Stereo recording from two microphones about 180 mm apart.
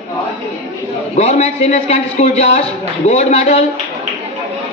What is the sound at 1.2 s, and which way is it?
A man's voice, 40° left (ahead or behind).